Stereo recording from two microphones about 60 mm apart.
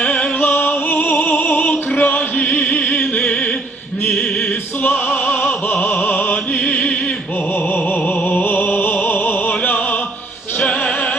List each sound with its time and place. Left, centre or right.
0.0 s music: left
4.4 s opera: left
5.8 s music: left
10.7 s music: centre